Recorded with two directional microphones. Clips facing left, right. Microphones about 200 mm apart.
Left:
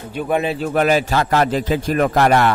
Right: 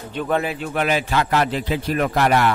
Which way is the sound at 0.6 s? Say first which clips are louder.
Left 5 dB; 40° left (ahead or behind).